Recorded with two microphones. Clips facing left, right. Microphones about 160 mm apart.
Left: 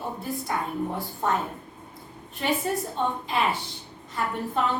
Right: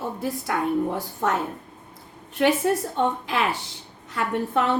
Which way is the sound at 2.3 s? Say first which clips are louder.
Right 6 dB; 75° right (ahead or behind).